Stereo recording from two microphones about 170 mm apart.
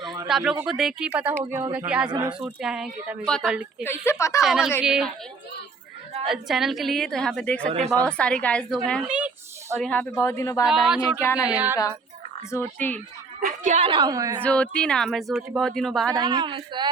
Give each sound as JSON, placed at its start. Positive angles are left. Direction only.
{"t": 0.3, "sound": "speech", "side_deg": 0}
{"t": 2.4, "sound": "speech", "side_deg": -5}
{"t": 3.8, "sound": "a woman's voice", "side_deg": 15}
{"t": 4.4, "sound": "speech", "side_deg": 0}
{"t": 6.2, "sound": "a woman's voice", "side_deg": 0}
{"t": 9.0, "sound": "a sound", "side_deg": -10}
{"t": 9.8, "sound": "a woman's voice", "side_deg": 10}
{"t": 10.7, "sound": "speech", "side_deg": -5}
{"t": 12.5, "sound": "a woman's voice", "side_deg": 15}
{"t": 13.4, "sound": "a woman's voice", "side_deg": -55}
{"t": 13.7, "sound": "speech", "side_deg": -30}
{"t": 14.4, "sound": "speech", "side_deg": 5}
{"t": 16.1, "sound": "speech", "side_deg": -25}